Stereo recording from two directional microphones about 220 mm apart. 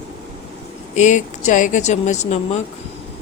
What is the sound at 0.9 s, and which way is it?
Speech, 35° left (ahead or behind).